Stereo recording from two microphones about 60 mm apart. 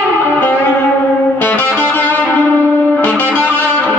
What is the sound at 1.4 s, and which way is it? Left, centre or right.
Music, left.